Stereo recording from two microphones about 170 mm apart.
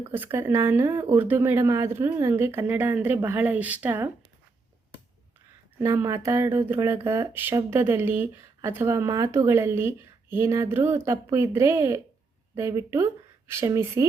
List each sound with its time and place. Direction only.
0.0 s speech: 10° right (ahead or behind)
5.8 s speech: 15° right (ahead or behind)